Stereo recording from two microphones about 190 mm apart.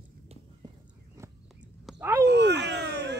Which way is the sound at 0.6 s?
20° right (ahead or behind).